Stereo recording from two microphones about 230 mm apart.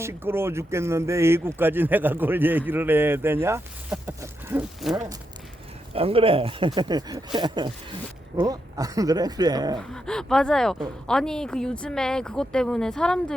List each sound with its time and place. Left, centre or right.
0.0 s speech: centre
5.9 s speech: right
9.7 s speech: centre